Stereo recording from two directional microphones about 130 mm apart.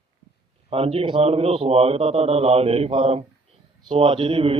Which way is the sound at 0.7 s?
50° right (ahead or behind).